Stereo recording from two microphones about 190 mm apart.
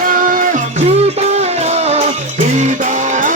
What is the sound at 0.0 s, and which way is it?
Music, 45° right (ahead or behind).